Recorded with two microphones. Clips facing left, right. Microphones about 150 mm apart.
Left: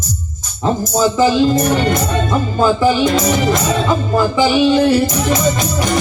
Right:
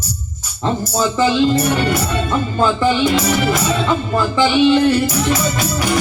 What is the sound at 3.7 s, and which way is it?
Music, 10° left (ahead or behind).